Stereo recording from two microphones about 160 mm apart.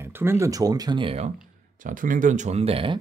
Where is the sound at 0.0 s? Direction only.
15° right (ahead or behind); by 1.3 s 35° right (ahead or behind).